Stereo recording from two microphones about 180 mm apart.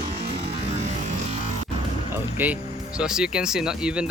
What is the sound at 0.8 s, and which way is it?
Music, 40° right (ahead or behind).